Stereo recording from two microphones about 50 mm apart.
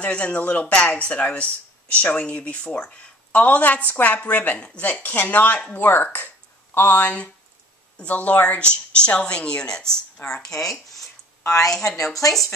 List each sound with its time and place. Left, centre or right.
0.0 s a woman's voice: left; by 12.1 s centre